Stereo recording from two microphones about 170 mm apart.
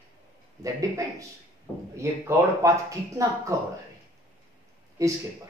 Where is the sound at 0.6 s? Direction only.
20° right (ahead or behind).